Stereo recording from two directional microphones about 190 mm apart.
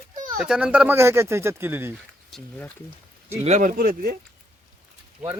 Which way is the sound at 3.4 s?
40° right (ahead or behind).